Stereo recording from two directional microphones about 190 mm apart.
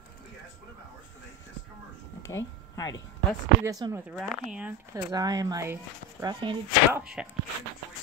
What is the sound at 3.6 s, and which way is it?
Speech, 15° right (ahead or behind).